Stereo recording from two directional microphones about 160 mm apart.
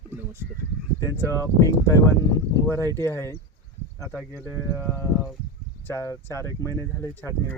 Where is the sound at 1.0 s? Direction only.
20° left (ahead or behind).